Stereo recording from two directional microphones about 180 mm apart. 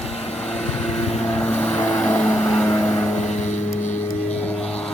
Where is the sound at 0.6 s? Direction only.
5° left (ahead or behind).